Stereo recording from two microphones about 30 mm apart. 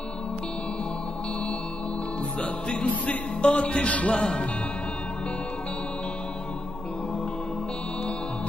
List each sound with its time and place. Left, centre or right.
3.1 s music: left
4.1 s speech: left